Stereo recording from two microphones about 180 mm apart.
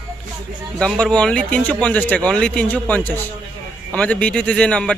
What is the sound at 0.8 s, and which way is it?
Speech, 5° left (ahead or behind).